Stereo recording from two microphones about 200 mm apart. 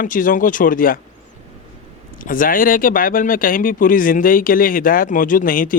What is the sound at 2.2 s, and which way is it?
A man's voice, 45° left (ahead or behind).